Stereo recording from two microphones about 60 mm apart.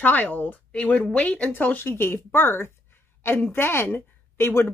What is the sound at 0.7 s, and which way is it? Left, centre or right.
A woman's voice, left.